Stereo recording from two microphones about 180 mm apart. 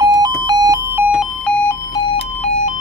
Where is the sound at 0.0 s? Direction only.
20° right (ahead or behind).